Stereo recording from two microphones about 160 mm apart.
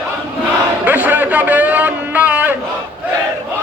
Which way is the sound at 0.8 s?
10° right (ahead or behind).